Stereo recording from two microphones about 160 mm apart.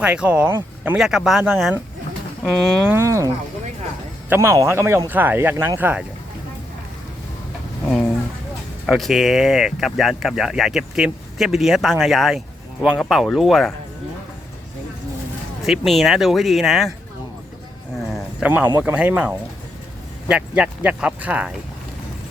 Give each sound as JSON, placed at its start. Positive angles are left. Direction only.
{"t": 0.0, "sound": "speech", "side_deg": -5}
{"t": 8.9, "sound": "speech", "side_deg": 0}
{"t": 15.6, "sound": "speech", "side_deg": 0}
{"t": 18.1, "sound": "a sound", "side_deg": -5}
{"t": 18.8, "sound": "speech", "side_deg": -10}